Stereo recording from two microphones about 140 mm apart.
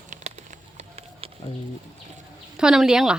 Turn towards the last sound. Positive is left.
turn(degrees=-5)  # may be behind; listen again after turning